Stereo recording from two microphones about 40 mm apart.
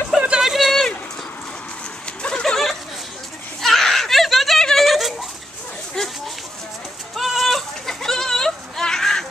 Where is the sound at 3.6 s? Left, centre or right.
Centre.